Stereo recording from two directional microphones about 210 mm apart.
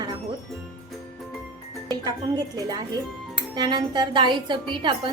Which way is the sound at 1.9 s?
20° right (ahead or behind).